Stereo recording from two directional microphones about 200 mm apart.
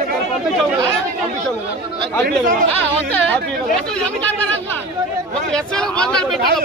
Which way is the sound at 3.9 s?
5° left (ahead or behind).